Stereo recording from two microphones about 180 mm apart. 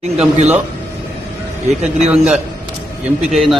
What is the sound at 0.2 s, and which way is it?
Speech, 40° right (ahead or behind).